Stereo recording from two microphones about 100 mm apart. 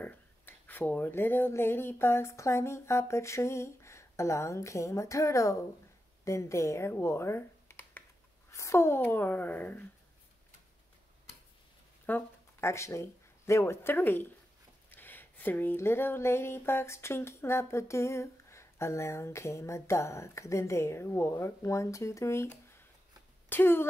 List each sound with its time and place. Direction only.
0.0 s speech: 20° left (ahead or behind)
12.1 s speech: 25° left (ahead or behind)